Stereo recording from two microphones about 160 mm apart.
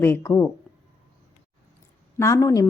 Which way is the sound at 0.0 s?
15° left (ahead or behind).